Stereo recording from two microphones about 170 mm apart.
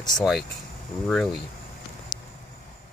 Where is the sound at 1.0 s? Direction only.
Centre (ahead or behind).